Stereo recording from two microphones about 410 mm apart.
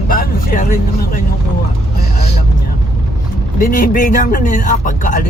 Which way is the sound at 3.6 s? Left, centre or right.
Centre.